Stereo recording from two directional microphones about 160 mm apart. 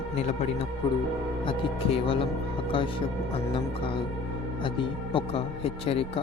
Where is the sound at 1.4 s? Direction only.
35° left (ahead or behind).